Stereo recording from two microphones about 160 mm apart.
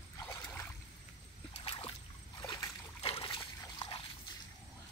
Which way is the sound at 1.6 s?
35° left (ahead or behind).